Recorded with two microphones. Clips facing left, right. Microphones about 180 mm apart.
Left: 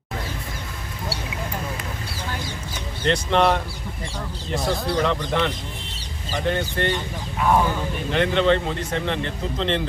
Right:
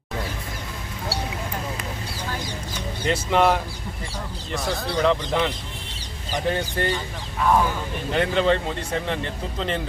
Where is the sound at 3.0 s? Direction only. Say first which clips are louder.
Left 1 dB; 5° right (ahead or behind).